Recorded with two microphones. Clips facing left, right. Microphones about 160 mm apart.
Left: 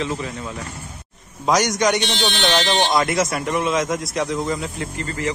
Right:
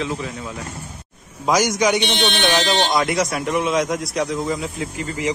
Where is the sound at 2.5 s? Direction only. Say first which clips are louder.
Left 3 dB; centre (ahead or behind).